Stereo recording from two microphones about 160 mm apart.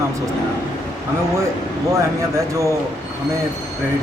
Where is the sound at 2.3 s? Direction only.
20° right (ahead or behind).